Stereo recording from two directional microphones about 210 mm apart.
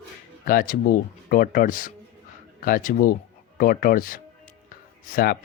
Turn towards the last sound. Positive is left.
turn(degrees=45)  # may be behind; listen again after turning